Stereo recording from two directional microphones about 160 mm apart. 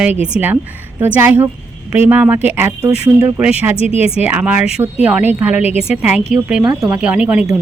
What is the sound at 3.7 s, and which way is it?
Speech, 40° left (ahead or behind).